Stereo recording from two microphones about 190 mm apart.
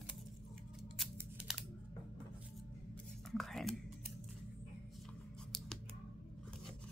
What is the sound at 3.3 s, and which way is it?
Whispering, centre (ahead or behind).